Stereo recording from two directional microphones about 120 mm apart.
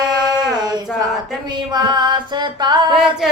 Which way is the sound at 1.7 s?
40° right (ahead or behind).